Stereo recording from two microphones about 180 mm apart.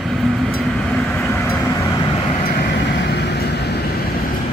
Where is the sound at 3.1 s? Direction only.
65° left (ahead or behind).